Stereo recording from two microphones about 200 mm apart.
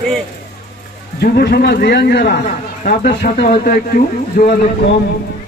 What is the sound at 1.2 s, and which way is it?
A man's voice, 50° left (ahead or behind).